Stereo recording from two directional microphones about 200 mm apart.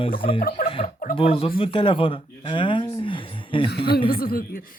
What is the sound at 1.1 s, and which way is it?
Speech, 30° left (ahead or behind).